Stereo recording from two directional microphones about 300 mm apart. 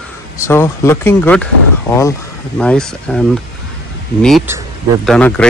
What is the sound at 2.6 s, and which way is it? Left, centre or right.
Speech, centre.